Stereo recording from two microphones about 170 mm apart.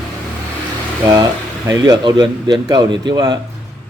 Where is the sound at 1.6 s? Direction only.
20° right (ahead or behind).